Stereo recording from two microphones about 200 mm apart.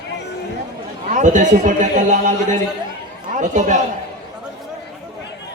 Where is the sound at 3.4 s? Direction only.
40° right (ahead or behind).